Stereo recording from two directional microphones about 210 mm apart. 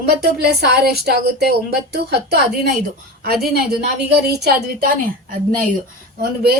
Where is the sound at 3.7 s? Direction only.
50° right (ahead or behind).